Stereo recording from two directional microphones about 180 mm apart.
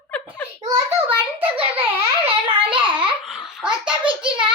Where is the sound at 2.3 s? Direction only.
25° right (ahead or behind).